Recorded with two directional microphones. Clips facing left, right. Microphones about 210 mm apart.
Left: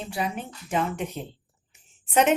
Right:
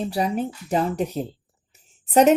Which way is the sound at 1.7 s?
40° right (ahead or behind).